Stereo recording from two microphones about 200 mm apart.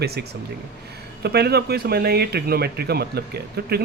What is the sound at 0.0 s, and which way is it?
Speech, 55° right (ahead or behind).